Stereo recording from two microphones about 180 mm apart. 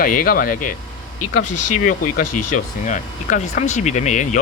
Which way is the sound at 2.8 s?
45° left (ahead or behind).